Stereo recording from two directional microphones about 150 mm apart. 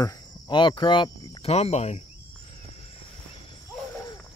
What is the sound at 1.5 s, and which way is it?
Speech, 45° left (ahead or behind).